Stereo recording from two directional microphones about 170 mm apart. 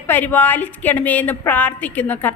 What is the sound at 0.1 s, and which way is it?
A woman's voice, 10° left (ahead or behind).